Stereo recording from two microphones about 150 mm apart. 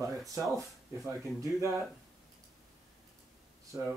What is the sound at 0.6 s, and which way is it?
Speech, 20° right (ahead or behind).